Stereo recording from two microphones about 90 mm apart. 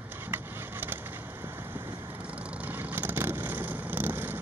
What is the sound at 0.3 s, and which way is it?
Vehicle, 25° right (ahead or behind).